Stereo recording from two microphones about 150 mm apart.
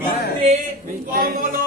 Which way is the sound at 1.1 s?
75° right (ahead or behind).